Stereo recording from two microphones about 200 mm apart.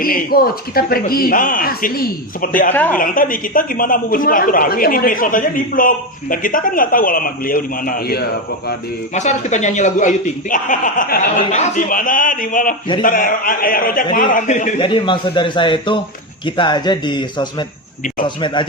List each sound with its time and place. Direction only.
0.0 s a man's voice: 45° left (ahead or behind)
2.7 s a woman's voice: 10° left (ahead or behind)
3.0 s a man's voice: 45° left (ahead or behind)
9.1 s a man's voice: 35° left (ahead or behind)
14.8 s a man's voice: 25° left (ahead or behind)